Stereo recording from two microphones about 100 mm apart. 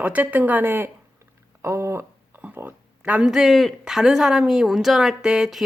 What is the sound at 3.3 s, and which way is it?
Speech, 5° right (ahead or behind).